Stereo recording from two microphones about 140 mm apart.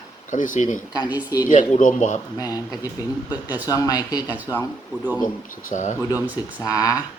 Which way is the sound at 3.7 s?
25° left (ahead or behind).